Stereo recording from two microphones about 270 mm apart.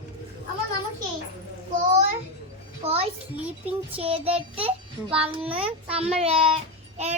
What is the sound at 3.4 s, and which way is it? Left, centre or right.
Child singing, centre.